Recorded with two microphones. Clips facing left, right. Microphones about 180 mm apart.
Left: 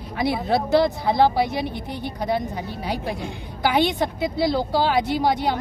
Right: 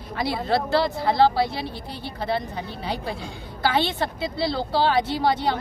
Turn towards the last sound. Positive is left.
turn(degrees=15)  # may be behind; listen again after turning